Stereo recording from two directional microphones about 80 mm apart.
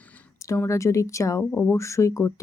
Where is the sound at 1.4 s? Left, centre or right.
Centre.